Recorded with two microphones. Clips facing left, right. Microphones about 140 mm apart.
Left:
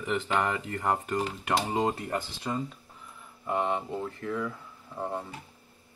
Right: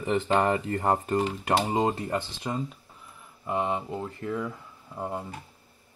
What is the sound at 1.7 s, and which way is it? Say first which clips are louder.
Speech: right 2 dB; 20° right (ahead or behind).